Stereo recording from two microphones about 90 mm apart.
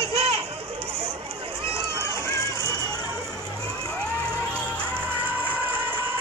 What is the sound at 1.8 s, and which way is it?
Crowd, 40° right (ahead or behind).